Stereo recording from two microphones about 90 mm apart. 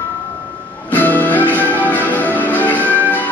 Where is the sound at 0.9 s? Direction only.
20° left (ahead or behind).